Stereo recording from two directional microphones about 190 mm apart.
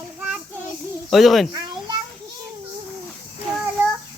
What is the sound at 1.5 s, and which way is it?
Children playing, 20° right (ahead or behind).